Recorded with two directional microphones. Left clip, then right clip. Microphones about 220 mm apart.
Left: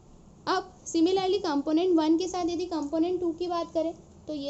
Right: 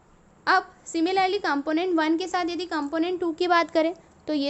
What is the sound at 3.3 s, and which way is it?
Speech, 45° right (ahead or behind).